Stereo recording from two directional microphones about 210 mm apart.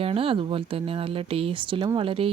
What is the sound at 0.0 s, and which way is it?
Speech, 25° right (ahead or behind).